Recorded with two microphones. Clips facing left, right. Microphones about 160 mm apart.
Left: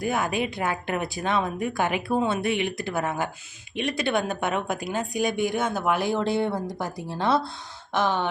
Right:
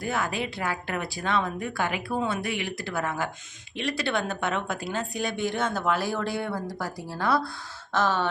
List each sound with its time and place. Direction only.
0.0 s speech: 15° left (ahead or behind)
7.9 s gasp: 15° left (ahead or behind)